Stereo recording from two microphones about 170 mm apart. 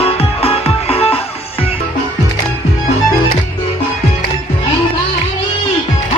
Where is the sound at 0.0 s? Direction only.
35° left (ahead or behind).